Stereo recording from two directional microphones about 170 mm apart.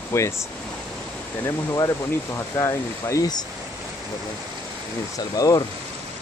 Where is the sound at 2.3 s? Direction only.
20° left (ahead or behind).